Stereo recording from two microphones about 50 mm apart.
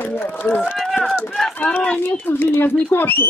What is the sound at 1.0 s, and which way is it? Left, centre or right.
Speech, centre.